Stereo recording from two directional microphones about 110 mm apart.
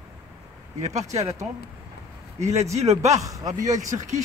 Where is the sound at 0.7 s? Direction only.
90° right.